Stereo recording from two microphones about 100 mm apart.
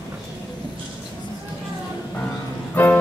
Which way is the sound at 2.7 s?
20° left (ahead or behind).